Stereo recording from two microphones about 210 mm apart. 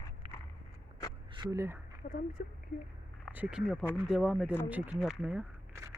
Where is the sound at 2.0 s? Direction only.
50° left (ahead or behind).